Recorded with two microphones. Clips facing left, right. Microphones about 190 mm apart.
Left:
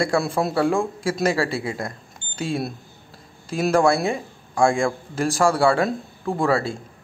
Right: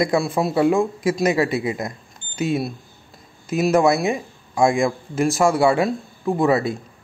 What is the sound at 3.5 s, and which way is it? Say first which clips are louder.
A man's voice: right 2 dB; 5° right (ahead or behind).